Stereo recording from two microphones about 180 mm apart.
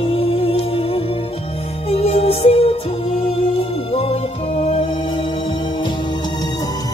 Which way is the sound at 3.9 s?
35° left (ahead or behind).